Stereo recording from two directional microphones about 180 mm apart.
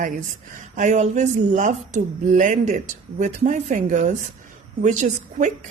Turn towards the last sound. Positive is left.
turn(degrees=-40)  # may be behind; listen again after turning